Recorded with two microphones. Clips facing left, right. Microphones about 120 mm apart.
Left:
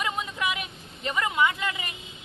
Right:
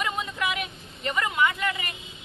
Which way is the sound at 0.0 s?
15° left (ahead or behind).